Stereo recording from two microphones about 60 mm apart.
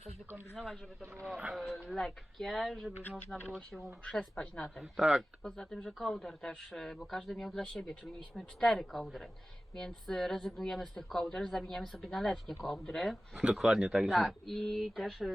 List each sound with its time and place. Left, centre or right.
0.5 s speech: centre
1.4 s speech: centre
1.6 s speech: centre
4.0 s speech: centre
4.9 s speech: centre
5.4 s speech: centre
13.3 s speech: centre